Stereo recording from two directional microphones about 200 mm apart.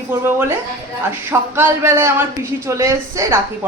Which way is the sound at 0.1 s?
10° right (ahead or behind).